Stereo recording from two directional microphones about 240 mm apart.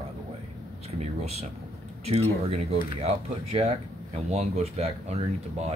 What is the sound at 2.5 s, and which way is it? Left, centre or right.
Speech, right.